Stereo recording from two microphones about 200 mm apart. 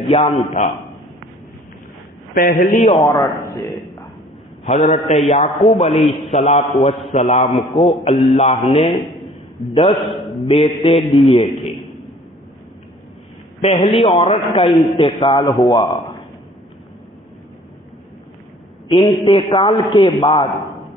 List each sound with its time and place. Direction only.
0.6 s a man's voice: 35° left (ahead or behind)
2.3 s a man's voice: 45° left (ahead or behind)
3.0 s a man's voice: 15° left (ahead or behind)
4.6 s a man's voice: 35° left (ahead or behind)
9.9 s a man's voice: centre (ahead or behind)
10.4 s speech: 25° left (ahead or behind)
13.6 s speech: 30° left (ahead or behind)
14.7 s a man's voice: centre (ahead or behind)
15.0 s speech: 25° left (ahead or behind)
18.9 s speech: 25° left (ahead or behind)